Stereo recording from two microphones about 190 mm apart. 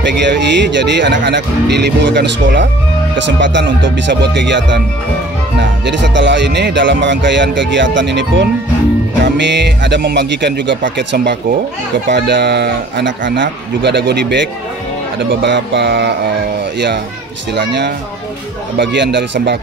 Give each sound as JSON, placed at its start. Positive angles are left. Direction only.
{"t": 0.0, "sound": "speech", "side_deg": -65}
{"t": 17.6, "sound": "speech", "side_deg": -65}